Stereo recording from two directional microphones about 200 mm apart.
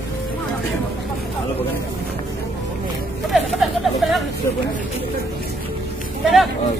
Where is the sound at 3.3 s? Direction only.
Centre (ahead or behind).